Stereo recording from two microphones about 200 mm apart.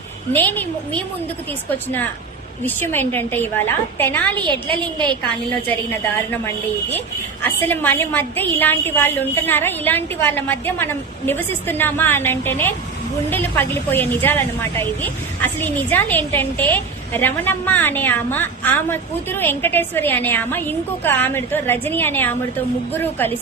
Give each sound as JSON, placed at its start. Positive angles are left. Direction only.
{"t": 0.3, "sound": "a woman's voice", "side_deg": 10}
{"t": 4.4, "sound": "a woman's voice", "side_deg": -25}
{"t": 7.4, "sound": "a woman's voice", "side_deg": 10}